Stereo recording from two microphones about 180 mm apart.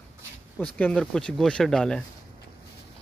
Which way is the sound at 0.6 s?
10° left (ahead or behind).